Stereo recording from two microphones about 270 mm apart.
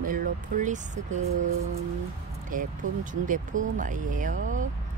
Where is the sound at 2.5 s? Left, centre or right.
Right.